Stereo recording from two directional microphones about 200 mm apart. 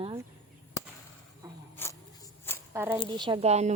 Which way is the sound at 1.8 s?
10° left (ahead or behind).